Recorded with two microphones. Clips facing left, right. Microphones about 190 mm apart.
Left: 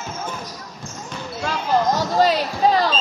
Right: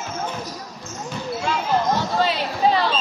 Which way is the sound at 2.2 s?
40° left (ahead or behind).